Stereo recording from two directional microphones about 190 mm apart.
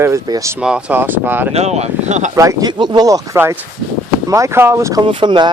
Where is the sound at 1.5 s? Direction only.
35° right (ahead or behind).